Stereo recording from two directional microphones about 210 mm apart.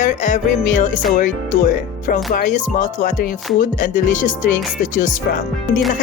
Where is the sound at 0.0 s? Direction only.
35° left (ahead or behind).